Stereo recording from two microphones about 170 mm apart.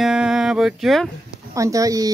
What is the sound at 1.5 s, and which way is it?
Speech, 20° right (ahead or behind).